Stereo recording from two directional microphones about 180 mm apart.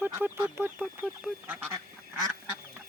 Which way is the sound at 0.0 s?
10° right (ahead or behind).